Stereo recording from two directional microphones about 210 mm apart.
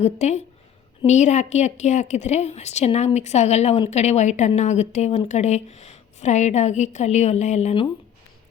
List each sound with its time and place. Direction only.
0.0 s a woman's voice: 35° left (ahead or behind)